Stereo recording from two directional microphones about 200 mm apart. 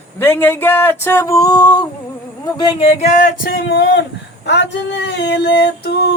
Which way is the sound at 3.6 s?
55° left (ahead or behind).